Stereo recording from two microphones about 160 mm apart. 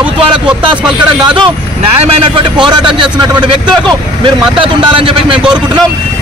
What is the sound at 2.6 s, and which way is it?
Speech, 30° right (ahead or behind).